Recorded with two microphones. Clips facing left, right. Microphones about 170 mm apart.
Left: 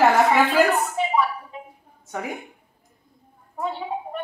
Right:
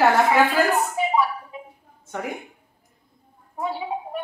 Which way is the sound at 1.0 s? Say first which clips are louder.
Right 1 dB; 5° right (ahead or behind).